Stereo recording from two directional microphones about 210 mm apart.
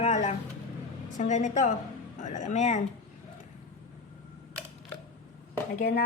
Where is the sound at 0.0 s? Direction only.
35° left (ahead or behind).